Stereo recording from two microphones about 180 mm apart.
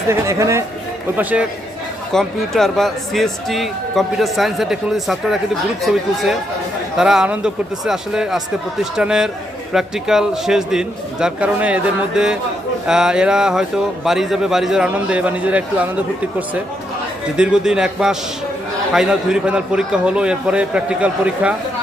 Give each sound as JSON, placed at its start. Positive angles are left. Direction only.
{"t": 0.1, "sound": "speech", "side_deg": -15}
{"t": 2.1, "sound": "speech", "side_deg": 0}
{"t": 17.3, "sound": "speech", "side_deg": -5}